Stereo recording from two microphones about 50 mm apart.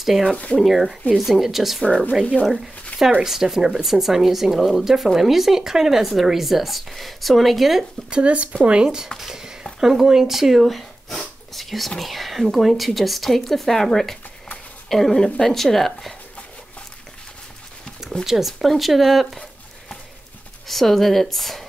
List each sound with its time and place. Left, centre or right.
0.0 s speech: centre
8.1 s speech: right; by 16.2 s centre
18.2 s speech: centre
20.6 s speech: centre